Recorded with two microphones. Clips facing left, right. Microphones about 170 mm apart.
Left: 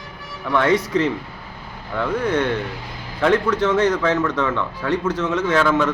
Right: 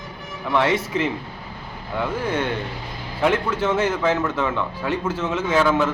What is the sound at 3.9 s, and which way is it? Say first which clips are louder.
Speech: left 2 dB; 25° right (ahead or behind).